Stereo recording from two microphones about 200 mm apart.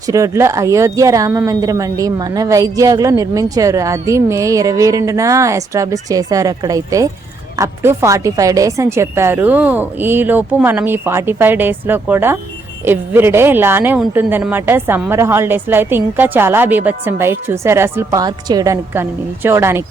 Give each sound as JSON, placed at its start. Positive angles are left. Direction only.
{"t": 0.1, "sound": "speech", "side_deg": -15}